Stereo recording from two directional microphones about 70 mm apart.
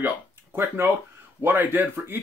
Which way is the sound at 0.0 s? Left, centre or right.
Right.